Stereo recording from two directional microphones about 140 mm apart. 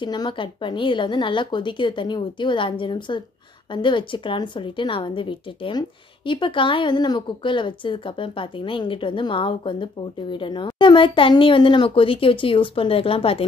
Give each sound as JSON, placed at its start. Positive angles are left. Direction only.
{"t": 0.0, "sound": "a woman's voice", "side_deg": 35}